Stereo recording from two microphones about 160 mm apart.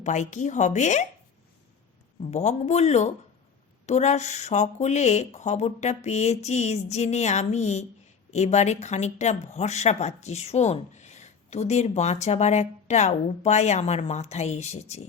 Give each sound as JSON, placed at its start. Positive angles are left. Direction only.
{"t": 0.0, "sound": "speech", "side_deg": 50}
{"t": 2.2, "sound": "speech", "side_deg": 45}